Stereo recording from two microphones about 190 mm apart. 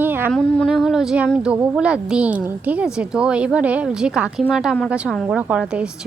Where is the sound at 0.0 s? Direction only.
10° right (ahead or behind).